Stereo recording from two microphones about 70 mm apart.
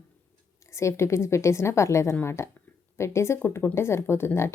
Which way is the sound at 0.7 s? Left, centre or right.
Left.